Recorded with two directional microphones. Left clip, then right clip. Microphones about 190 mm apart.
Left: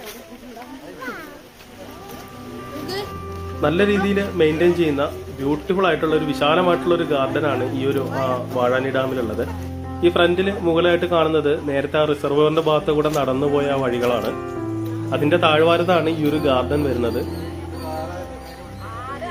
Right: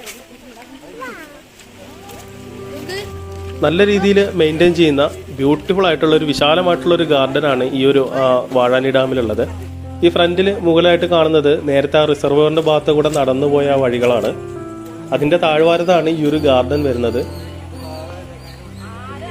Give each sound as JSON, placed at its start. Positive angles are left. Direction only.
{"t": 3.6, "sound": "a man's voice", "side_deg": -35}